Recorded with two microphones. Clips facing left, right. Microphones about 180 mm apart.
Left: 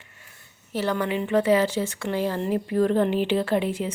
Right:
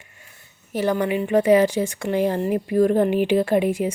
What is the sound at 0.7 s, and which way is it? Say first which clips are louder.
Speech: right 4 dB; 15° right (ahead or behind).